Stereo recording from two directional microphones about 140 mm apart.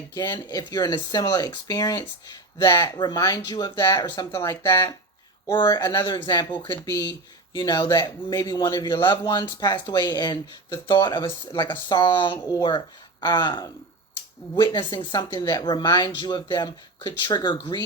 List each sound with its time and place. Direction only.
0.1 s speech: 30° left (ahead or behind)